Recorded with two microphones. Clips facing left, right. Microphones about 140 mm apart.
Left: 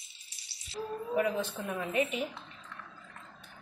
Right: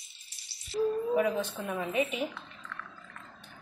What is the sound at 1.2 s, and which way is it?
A woman's voice, centre (ahead or behind).